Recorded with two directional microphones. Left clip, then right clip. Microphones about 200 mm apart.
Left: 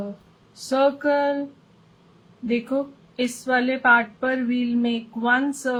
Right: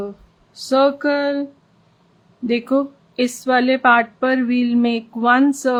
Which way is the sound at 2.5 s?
50° right (ahead or behind).